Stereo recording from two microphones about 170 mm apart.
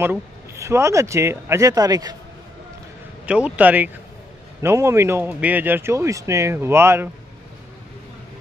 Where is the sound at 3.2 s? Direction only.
5° right (ahead or behind).